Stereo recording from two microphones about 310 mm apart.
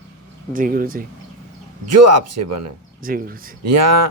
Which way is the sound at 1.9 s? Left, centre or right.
Right.